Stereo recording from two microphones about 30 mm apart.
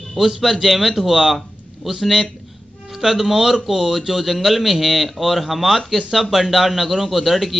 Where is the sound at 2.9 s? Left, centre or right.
Centre.